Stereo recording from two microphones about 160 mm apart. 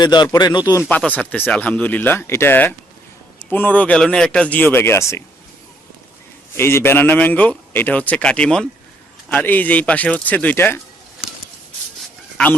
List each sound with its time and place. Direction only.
0.0 s speech: 25° left (ahead or behind)
0.8 s a man's voice: 10° left (ahead or behind)
6.6 s a man's voice: 15° left (ahead or behind)